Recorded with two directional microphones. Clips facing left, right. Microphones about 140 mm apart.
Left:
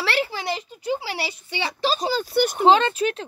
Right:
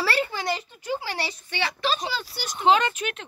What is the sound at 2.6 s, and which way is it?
Speech, 30° left (ahead or behind).